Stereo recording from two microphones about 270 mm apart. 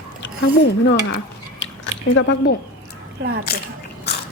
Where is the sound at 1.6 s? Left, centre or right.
Left.